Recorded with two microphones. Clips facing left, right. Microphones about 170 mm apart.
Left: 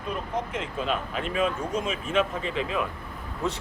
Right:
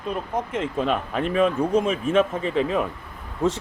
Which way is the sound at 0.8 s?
50° right (ahead or behind).